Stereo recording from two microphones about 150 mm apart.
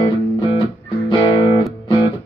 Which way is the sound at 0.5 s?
35° left (ahead or behind).